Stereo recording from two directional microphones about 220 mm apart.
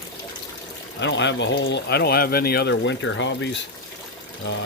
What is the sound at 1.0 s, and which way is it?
Speech, 55° left (ahead or behind).